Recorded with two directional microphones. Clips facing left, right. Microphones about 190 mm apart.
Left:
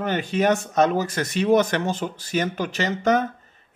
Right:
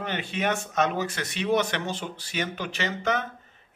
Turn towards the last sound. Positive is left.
turn(degrees=40)  # may be behind; listen again after turning